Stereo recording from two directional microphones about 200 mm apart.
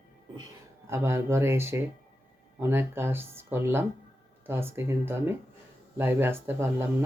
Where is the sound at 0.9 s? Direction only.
15° right (ahead or behind).